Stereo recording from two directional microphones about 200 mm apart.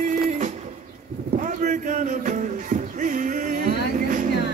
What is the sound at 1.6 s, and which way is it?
Music, 40° right (ahead or behind).